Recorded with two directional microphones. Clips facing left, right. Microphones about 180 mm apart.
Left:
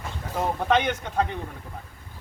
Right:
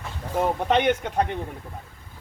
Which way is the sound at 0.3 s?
20° right (ahead or behind).